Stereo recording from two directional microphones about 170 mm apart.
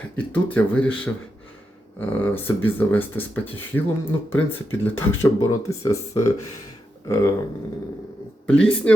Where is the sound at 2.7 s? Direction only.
10° left (ahead or behind).